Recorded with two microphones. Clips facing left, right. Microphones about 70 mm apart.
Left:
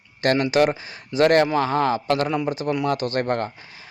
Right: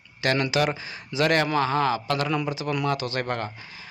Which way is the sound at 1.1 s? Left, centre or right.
Left.